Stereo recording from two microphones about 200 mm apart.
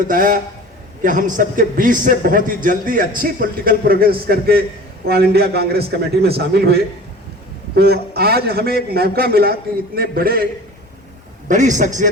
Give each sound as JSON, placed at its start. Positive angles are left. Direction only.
{"t": 0.1, "sound": "a man's voice", "side_deg": -45}
{"t": 7.8, "sound": "a man's voice", "side_deg": -50}
{"t": 11.4, "sound": "a man's voice", "side_deg": -40}